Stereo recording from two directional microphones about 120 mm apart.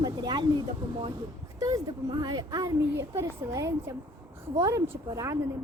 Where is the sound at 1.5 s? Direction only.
35° right (ahead or behind).